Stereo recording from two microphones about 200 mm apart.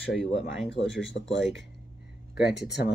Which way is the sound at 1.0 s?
65° left (ahead or behind).